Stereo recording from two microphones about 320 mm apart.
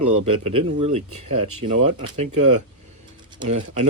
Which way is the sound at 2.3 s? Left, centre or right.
Right.